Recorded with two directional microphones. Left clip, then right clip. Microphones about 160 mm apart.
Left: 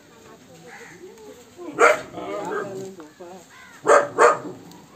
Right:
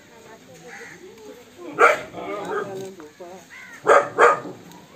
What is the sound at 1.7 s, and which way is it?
Dog, 15° left (ahead or behind).